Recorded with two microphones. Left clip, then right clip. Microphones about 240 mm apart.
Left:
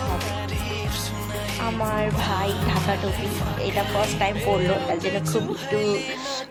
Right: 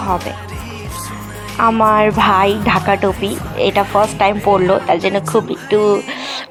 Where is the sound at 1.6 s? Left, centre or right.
Right.